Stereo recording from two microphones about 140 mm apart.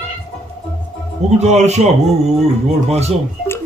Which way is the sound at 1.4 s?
55° right (ahead or behind).